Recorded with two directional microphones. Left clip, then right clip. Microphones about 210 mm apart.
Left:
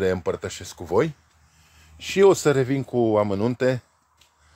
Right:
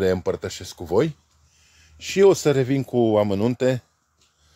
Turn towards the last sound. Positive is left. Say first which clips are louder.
# right 1 dB
turn(degrees=0)  # may be behind; listen again after turning